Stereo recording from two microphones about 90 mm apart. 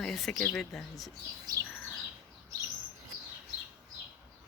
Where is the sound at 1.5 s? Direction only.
45° right (ahead or behind).